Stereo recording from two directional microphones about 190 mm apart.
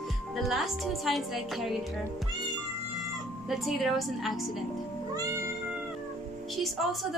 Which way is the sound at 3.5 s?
Centre (ahead or behind).